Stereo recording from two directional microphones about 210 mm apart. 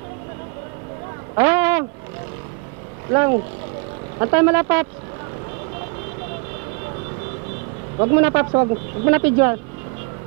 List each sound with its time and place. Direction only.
1.3 s a sound: 15° right (ahead or behind)
3.1 s speech: 20° right (ahead or behind)
8.0 s speech: 20° right (ahead or behind)